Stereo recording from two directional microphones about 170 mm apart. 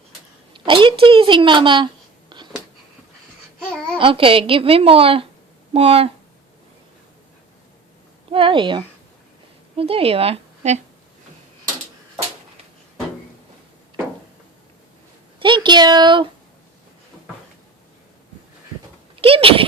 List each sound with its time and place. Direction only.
0.5 s a sound: 30° right (ahead or behind)
3.9 s a woman's voice: 30° right (ahead or behind)
8.3 s speech: 30° right (ahead or behind)
15.4 s a woman's voice: 30° right (ahead or behind)
19.2 s a woman's voice: 35° right (ahead or behind)